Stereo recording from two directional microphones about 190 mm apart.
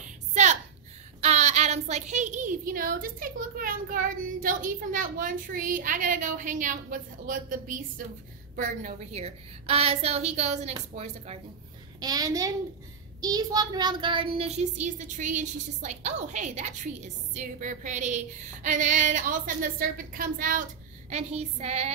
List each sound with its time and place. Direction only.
0.0 s a sound: 40° right (ahead or behind)
1.2 s a woman's voice: 35° right (ahead or behind)
12.0 s a child's voice: 20° right (ahead or behind); by 20.6 s 45° right (ahead or behind)
21.1 s speech: 35° right (ahead or behind)